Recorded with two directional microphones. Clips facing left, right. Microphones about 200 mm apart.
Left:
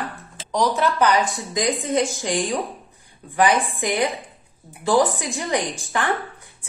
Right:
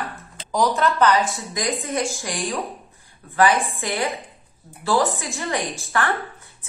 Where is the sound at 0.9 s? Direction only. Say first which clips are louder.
Even; 10° left (ahead or behind).